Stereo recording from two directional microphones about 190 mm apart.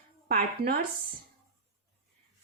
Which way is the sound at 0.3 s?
55° right (ahead or behind).